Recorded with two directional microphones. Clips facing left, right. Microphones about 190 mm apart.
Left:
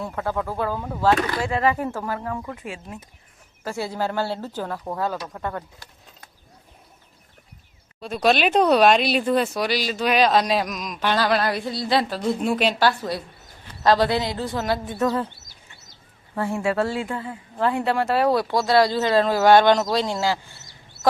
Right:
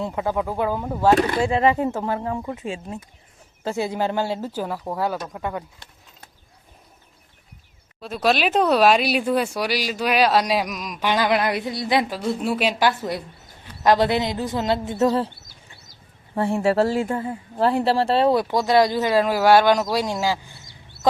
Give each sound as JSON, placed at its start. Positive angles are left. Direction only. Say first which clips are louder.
{"t": 0.0, "sound": "speech", "louder": "right 3 dB", "side_deg": -15}
{"t": 1.1, "sound": "speech", "louder": "right 4 dB", "side_deg": -25}
{"t": 8.0, "sound": "speech", "louder": "left 1 dB", "side_deg": 0}
{"t": 12.9, "sound": "speech", "louder": "right 1 dB", "side_deg": -20}
{"t": 16.3, "sound": "speech", "louder": "right 4 dB", "side_deg": -30}
{"t": 21.0, "sound": "chicken", "louder": "even", "side_deg": -60}